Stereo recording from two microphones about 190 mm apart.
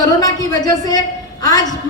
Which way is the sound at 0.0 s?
20° left (ahead or behind).